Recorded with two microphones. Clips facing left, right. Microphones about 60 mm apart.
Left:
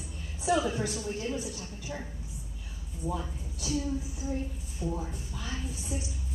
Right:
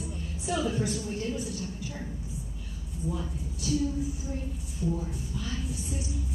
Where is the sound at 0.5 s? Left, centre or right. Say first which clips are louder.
Right 5 dB; centre.